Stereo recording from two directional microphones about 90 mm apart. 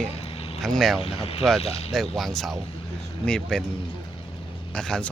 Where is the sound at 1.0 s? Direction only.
90° left.